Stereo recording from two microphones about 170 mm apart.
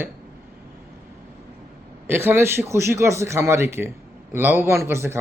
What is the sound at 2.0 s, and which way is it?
Speech, 15° right (ahead or behind).